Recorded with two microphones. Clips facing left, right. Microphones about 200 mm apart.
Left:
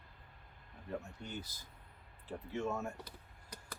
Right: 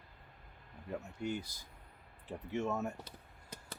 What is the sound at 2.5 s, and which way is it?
Speech, 20° right (ahead or behind).